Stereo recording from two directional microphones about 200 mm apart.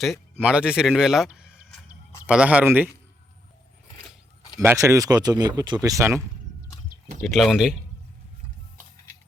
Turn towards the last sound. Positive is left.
turn(degrees=0)  # may be behind; listen again after turning